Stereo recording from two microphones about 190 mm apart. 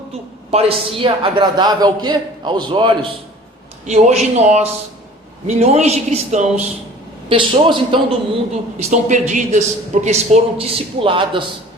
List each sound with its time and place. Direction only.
0.5 s a man's voice: 30° right (ahead or behind)
8.8 s a man's voice: 40° right (ahead or behind)